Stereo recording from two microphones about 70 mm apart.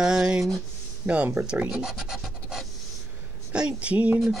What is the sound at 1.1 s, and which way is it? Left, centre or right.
Speech, right.